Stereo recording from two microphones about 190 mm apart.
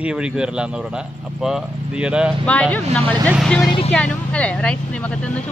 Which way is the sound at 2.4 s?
5° left (ahead or behind).